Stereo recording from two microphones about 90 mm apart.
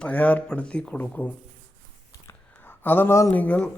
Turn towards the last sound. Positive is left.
turn(degrees=20)  # may be behind; listen again after turning